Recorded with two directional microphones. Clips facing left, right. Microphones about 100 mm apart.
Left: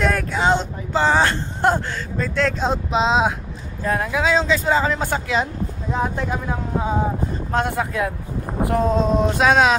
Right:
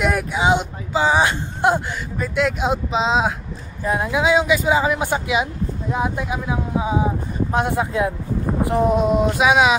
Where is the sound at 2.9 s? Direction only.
Centre (ahead or behind).